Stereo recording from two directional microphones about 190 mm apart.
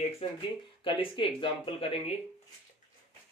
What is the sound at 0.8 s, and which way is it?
Speech, 25° left (ahead or behind).